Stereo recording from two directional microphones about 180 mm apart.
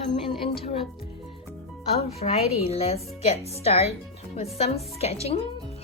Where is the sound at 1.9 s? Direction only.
35° left (ahead or behind).